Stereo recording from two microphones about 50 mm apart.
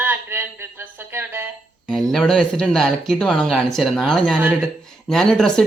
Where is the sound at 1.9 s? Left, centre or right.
Centre.